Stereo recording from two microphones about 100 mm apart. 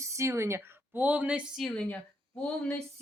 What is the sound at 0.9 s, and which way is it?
Speech, 15° right (ahead or behind).